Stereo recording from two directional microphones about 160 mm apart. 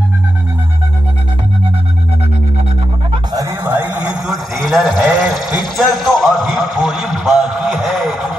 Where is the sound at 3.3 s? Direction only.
15° right (ahead or behind).